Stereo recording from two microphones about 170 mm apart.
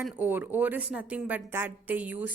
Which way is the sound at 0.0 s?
10° right (ahead or behind).